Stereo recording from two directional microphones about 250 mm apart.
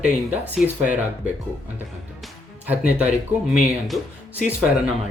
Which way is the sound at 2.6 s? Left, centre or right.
Centre.